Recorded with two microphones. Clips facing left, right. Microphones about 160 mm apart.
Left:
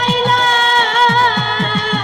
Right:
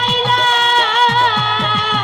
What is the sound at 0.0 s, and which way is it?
Music, 45° left (ahead or behind).